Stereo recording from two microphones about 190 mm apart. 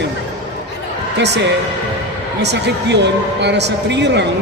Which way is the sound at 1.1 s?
65° right (ahead or behind).